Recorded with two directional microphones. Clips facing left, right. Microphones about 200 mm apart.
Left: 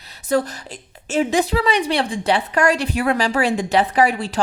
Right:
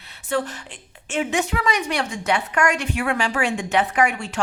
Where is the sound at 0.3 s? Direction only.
40° left (ahead or behind).